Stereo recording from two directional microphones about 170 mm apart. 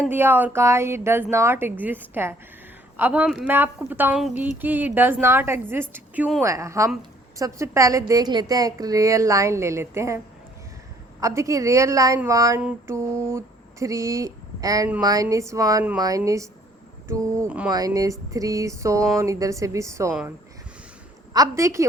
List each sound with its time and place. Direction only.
0.1 s a woman's voice: 10° right (ahead or behind)
11.2 s a woman's voice: 20° right (ahead or behind)
12.6 s a sound: 15° right (ahead or behind)
15.0 s a woman's voice: 20° right (ahead or behind)
21.3 s speech: 20° right (ahead or behind)